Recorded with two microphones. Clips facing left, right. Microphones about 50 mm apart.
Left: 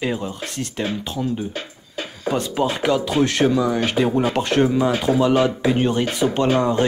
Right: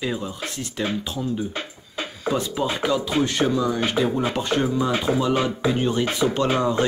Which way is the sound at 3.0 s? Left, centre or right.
Left.